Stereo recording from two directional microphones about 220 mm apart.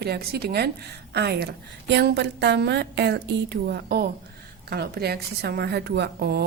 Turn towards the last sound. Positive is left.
turn(degrees=-45)  # may be behind; listen again after turning